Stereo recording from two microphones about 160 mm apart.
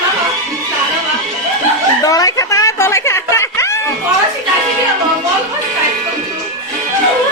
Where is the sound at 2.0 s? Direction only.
20° left (ahead or behind).